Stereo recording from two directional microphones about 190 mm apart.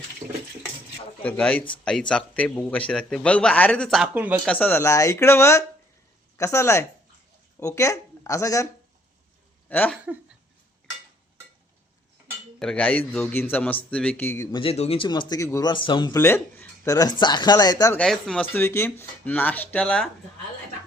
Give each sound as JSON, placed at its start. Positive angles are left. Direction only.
{"t": 1.2, "sound": "a man's voice", "side_deg": 5}
{"t": 4.4, "sound": "speech", "side_deg": 10}
{"t": 9.6, "sound": "speech", "side_deg": 10}
{"t": 12.5, "sound": "speech", "side_deg": 5}
{"t": 14.6, "sound": "speech", "side_deg": 30}
{"t": 17.9, "sound": "a man's voice", "side_deg": 5}
{"t": 18.5, "sound": "speech", "side_deg": 15}